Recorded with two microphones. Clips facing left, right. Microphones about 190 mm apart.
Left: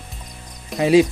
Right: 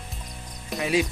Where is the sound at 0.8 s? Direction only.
30° left (ahead or behind).